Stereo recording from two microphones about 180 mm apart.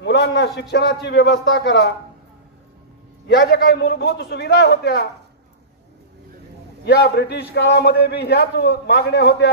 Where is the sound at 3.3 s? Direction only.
60° left (ahead or behind).